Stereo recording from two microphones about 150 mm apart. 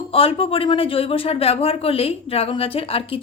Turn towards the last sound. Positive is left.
turn(degrees=40)  # may be behind; listen again after turning